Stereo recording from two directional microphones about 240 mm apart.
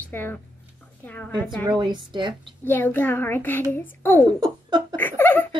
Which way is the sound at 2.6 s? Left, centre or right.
Centre.